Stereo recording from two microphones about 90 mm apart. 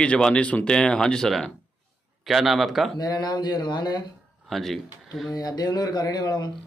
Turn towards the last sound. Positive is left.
turn(degrees=50)  # may be behind; listen again after turning